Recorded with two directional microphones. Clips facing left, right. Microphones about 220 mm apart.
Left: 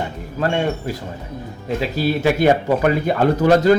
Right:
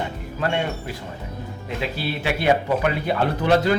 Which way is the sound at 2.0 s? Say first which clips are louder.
Left 11 dB; 45° left (ahead or behind).